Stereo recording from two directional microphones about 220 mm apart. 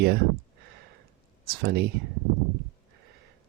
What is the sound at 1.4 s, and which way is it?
Speech, 45° right (ahead or behind).